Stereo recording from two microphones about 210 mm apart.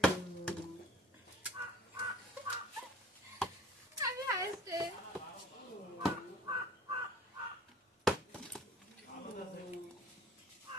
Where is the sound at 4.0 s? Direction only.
15° right (ahead or behind).